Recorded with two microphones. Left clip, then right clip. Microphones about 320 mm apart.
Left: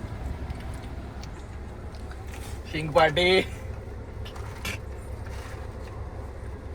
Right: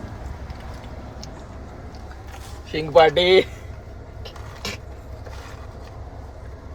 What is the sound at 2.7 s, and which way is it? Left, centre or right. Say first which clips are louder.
Speech: right 7 dB; right.